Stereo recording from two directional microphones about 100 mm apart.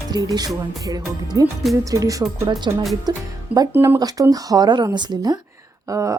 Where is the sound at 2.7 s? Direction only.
45° right (ahead or behind).